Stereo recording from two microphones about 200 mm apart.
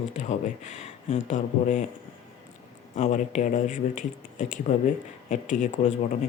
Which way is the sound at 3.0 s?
35° left (ahead or behind).